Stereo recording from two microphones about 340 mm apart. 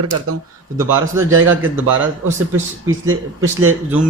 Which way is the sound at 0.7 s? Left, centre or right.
Centre.